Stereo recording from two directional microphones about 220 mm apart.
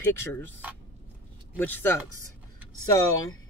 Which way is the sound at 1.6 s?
10° left (ahead or behind).